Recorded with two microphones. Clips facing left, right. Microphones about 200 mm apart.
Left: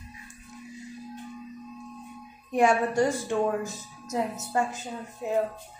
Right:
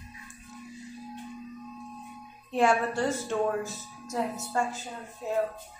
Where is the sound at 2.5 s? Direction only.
15° left (ahead or behind).